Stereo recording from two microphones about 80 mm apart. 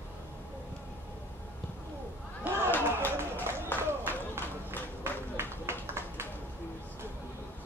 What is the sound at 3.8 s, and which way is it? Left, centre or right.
Run, right.